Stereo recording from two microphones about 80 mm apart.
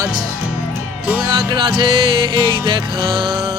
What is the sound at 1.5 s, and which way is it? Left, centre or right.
Music, right.